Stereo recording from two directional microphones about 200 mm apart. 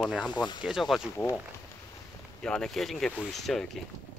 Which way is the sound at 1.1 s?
15° left (ahead or behind).